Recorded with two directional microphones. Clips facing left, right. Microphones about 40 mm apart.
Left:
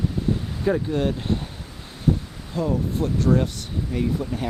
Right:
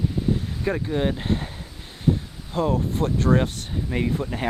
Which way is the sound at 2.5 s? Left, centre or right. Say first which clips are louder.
Right 1 dB; right.